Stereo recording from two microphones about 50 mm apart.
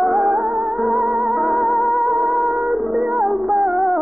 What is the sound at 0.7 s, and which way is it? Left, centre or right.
Music, centre.